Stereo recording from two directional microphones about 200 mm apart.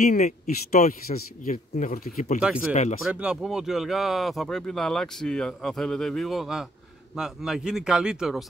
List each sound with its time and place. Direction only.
0.0 s speech: 40° left (ahead or behind)
2.4 s speech: 5° right (ahead or behind)
2.7 s speech: 35° left (ahead or behind)
3.1 s speech: 5° right (ahead or behind)